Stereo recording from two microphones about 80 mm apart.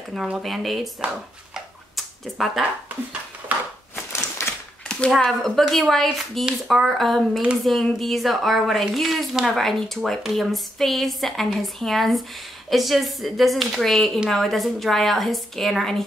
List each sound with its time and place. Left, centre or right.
0.1 s a woman's voice: centre
2.0 s a sound: centre
4.1 s typewriter: left
5.1 s a woman's voice: centre